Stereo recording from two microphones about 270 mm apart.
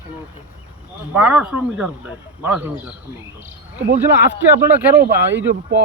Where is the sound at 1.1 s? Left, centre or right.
Centre.